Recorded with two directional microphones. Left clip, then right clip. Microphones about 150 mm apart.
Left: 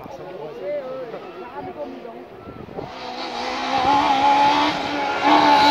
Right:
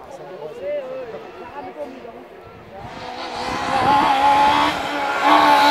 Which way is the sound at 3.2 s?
5° right (ahead or behind).